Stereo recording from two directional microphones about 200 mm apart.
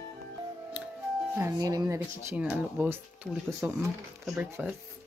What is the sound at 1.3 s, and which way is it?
Speech, 15° right (ahead or behind).